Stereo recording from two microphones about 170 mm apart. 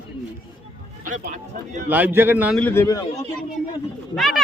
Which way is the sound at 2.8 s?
20° left (ahead or behind).